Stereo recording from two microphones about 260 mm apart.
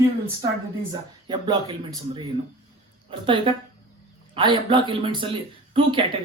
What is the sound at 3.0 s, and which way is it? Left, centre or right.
A woman's voice, centre.